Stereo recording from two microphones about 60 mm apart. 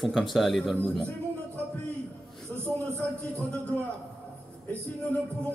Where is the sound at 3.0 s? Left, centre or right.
Left.